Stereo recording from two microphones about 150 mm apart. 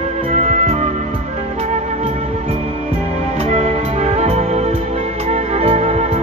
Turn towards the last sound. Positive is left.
turn(degrees=-45)  # may be behind; listen again after turning